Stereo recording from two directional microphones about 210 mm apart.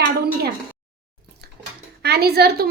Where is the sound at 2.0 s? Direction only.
50° right (ahead or behind).